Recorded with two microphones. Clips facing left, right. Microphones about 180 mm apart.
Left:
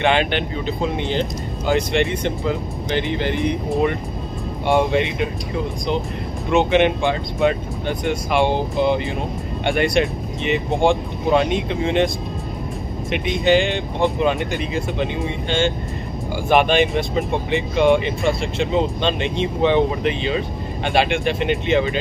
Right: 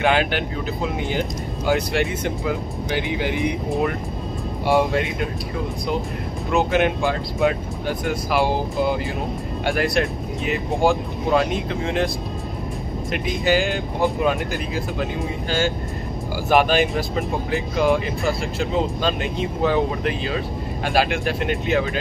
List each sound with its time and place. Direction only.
0.0 s speech: 5° right (ahead or behind)
6.5 s speech: centre (ahead or behind)
13.1 s speech: centre (ahead or behind)